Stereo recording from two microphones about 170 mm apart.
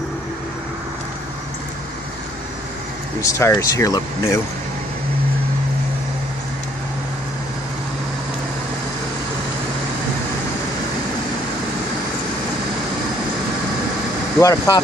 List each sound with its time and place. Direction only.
3.2 s speech: 20° left (ahead or behind)
14.4 s speech: 20° left (ahead or behind)